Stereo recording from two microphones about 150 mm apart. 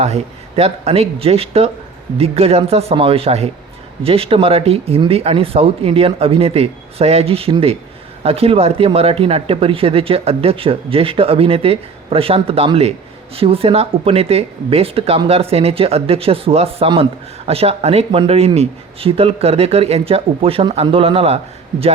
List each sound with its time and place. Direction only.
0.0 s a man's voice: 45° right (ahead or behind)